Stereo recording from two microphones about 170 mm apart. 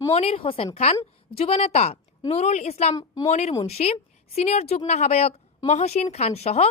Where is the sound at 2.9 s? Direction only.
20° left (ahead or behind).